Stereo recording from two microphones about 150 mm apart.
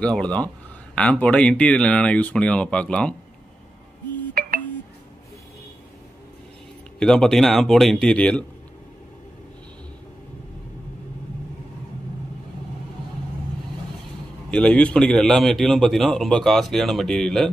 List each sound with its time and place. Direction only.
0.0 s speech: 5° left (ahead or behind)
4.4 s a sound: 80° right
7.0 s a man's voice: 5° left (ahead or behind)
14.5 s a man's voice: 5° left (ahead or behind)